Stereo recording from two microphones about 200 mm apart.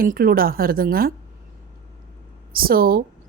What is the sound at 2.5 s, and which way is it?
Speech, 45° right (ahead or behind).